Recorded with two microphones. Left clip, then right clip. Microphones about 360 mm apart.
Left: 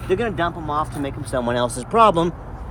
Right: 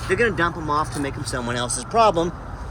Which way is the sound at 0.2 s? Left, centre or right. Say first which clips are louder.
Right 2 dB; centre.